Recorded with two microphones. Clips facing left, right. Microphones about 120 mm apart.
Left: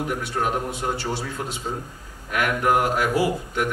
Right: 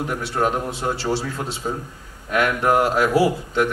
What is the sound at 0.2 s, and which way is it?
Speech, 30° right (ahead or behind).